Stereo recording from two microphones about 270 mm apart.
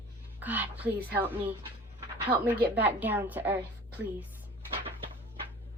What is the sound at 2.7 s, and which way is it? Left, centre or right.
Speech, centre.